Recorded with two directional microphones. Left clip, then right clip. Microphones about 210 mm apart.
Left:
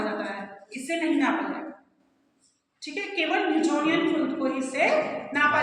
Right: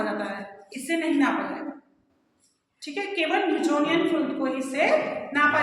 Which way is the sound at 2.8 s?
25° right (ahead or behind).